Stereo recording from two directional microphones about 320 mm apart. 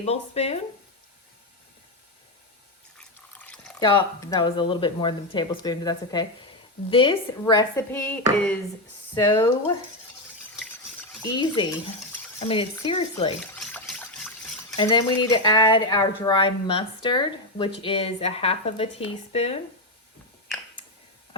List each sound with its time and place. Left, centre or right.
0.0 s speech: centre
3.0 s drip: centre
3.8 s speech: centre
11.2 s speech: centre
13.4 s water: centre
14.8 s speech: centre